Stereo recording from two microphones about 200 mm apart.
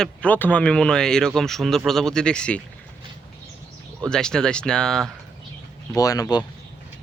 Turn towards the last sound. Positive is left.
turn(degrees=20)  # may be behind; listen again after turning